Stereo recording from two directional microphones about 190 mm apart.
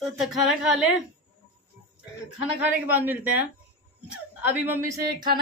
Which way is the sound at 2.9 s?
10° right (ahead or behind).